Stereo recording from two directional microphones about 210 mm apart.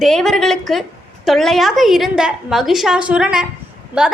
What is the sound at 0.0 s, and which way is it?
A woman's voice, centre (ahead or behind).